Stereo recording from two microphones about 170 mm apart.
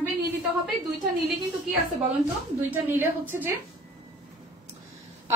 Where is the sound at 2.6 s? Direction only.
10° right (ahead or behind).